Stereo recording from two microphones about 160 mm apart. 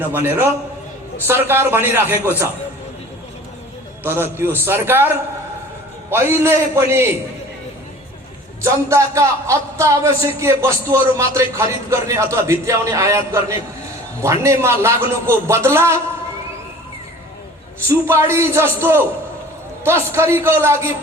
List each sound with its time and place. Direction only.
0.1 s a man's voice: 15° right (ahead or behind)
4.0 s a man's voice: 15° right (ahead or behind)
8.6 s a man's voice: 20° right (ahead or behind)
17.8 s a man's voice: 15° right (ahead or behind)